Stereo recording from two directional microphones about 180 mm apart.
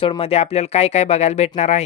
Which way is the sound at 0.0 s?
30° left (ahead or behind).